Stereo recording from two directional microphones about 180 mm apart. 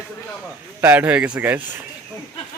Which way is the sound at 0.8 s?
10° right (ahead or behind).